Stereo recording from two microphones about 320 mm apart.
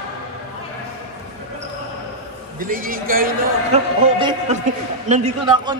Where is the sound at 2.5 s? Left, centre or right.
Right.